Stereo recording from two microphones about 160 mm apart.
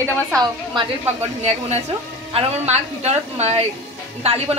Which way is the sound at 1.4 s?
45° right (ahead or behind).